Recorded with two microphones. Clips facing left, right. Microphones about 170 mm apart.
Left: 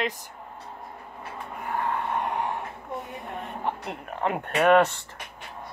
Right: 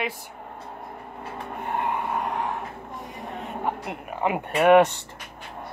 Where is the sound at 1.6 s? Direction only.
20° right (ahead or behind).